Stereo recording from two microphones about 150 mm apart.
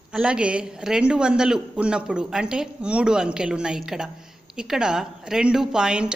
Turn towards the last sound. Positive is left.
turn(degrees=-5)  # may be behind; listen again after turning